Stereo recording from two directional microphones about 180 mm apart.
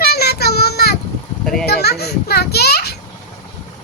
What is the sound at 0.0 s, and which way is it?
Child singing, 60° left (ahead or behind).